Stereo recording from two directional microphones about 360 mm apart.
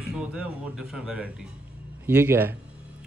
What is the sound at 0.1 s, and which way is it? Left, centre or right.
A man's voice, centre.